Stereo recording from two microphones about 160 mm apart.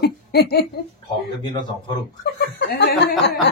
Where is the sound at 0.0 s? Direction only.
85° left.